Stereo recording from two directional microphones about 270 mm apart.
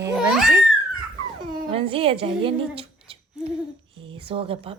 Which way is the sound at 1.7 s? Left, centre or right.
Centre.